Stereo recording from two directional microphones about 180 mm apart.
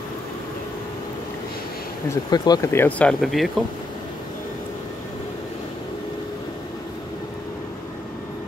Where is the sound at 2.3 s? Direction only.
20° left (ahead or behind); by 3.4 s centre (ahead or behind).